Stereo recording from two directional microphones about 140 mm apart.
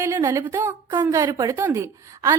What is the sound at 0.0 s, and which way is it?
A woman's voice, 20° right (ahead or behind).